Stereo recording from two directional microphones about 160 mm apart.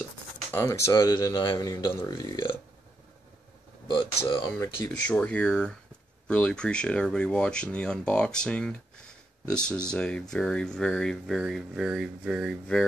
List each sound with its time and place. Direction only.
0.5 s speech: 15° left (ahead or behind)
3.8 s speech: 30° left (ahead or behind)
4.6 s speech: 10° left (ahead or behind)